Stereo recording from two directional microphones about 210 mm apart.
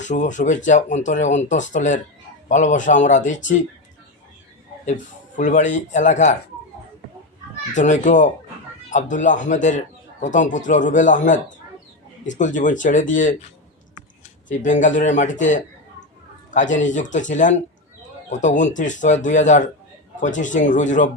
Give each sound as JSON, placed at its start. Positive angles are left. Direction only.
{"t": 0.0, "sound": "a man's voice", "side_deg": 35}
{"t": 5.4, "sound": "a man's voice", "side_deg": 35}
{"t": 7.7, "sound": "a man's voice", "side_deg": 35}
{"t": 14.6, "sound": "a man's voice", "side_deg": 35}